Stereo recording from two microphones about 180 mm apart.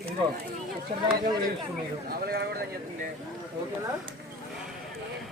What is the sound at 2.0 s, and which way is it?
Speech, 60° right (ahead or behind).